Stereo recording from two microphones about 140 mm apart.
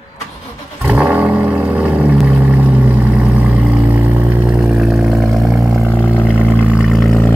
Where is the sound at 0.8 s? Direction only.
5° right (ahead or behind).